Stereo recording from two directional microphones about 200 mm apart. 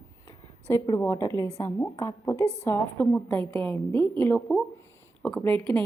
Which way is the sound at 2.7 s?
10° left (ahead or behind).